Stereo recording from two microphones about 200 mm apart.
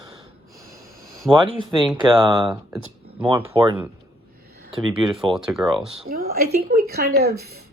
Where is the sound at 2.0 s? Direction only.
25° right (ahead or behind).